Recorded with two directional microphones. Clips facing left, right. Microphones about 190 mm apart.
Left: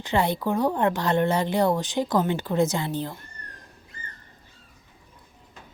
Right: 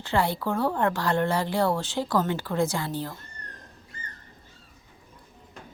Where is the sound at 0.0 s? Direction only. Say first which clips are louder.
Left 2 dB; 20° left (ahead or behind).